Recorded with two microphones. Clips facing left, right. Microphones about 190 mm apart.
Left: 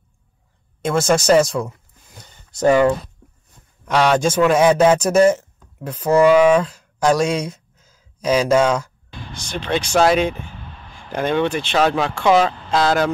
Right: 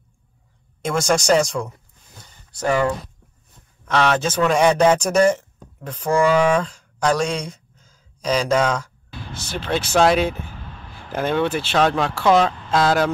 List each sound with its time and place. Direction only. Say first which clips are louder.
0.8 s speech: left 3 dB; 5° left (ahead or behind)
2.5 s speech: left 6 dB; 20° left (ahead or behind)
9.1 s speech: left 1 dB; 5° right (ahead or behind)